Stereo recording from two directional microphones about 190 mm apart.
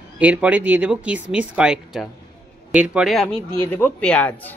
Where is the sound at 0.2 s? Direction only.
5° right (ahead or behind).